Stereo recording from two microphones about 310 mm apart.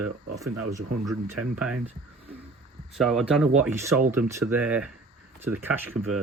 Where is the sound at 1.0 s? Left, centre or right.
Centre.